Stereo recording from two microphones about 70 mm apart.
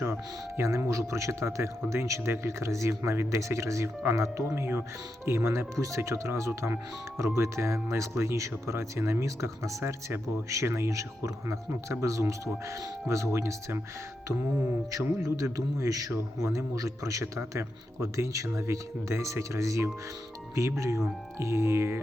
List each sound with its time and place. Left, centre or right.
0.0 s speech: right
14.8 s speech: right